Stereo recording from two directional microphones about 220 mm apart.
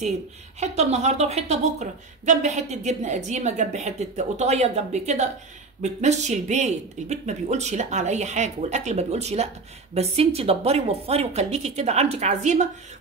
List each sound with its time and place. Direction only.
0.6 s a woman's voice: 30° right (ahead or behind)